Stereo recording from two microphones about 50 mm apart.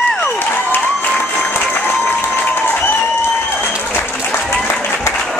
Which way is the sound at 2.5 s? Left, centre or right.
Left.